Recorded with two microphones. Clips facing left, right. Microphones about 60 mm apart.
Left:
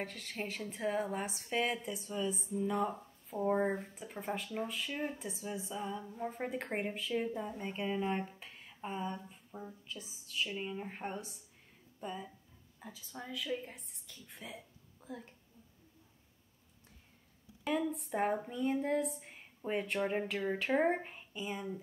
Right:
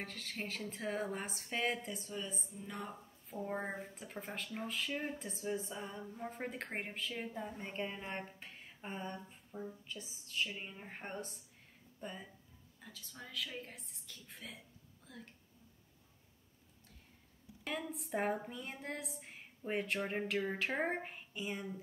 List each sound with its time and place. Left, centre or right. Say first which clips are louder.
0.0 s speech: left 3 dB; centre
9.0 s a sound: left 4 dB; centre
10.6 s speech: left 7 dB; centre
12.7 s a woman's voice: left 6 dB; centre
13.3 s speech: left 5 dB; centre
15.0 s a sound: left 7 dB; centre
17.6 s speech: left 7 dB; centre